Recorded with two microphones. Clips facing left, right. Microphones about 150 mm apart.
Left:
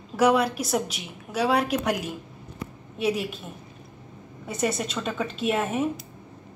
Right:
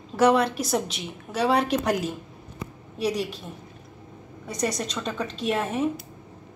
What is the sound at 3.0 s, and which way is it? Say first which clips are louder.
Speech: even; 5° left (ahead or behind).